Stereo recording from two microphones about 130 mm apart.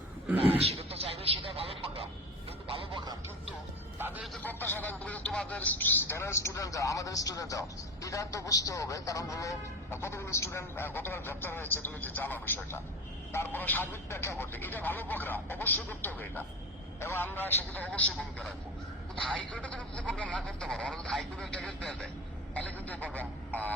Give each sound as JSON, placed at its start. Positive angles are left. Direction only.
{"t": 0.3, "sound": "a sound", "side_deg": -50}
{"t": 2.6, "sound": "music", "side_deg": -35}
{"t": 4.4, "sound": "a man's voice", "side_deg": 15}
{"t": 19.5, "sound": "speech", "side_deg": 10}